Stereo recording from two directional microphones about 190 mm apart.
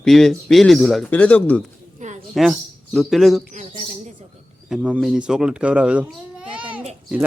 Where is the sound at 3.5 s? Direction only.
40° right (ahead or behind).